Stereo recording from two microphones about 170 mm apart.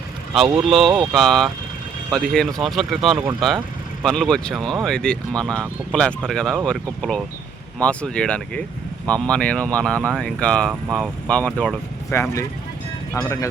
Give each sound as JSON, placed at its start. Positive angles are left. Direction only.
{"t": 0.5, "sound": "speech", "side_deg": 0}
{"t": 12.1, "sound": "speech", "side_deg": 15}